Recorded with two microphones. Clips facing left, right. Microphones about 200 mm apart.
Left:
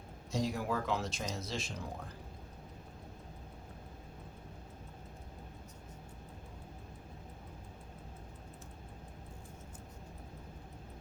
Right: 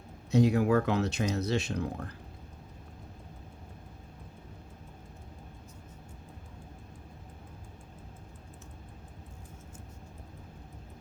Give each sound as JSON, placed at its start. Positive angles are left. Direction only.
{"t": 0.3, "sound": "speech", "side_deg": -65}